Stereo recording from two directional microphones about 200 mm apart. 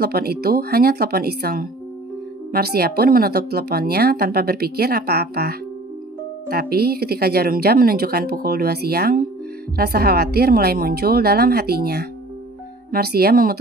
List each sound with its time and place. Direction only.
0.0 s speech: 50° right (ahead or behind)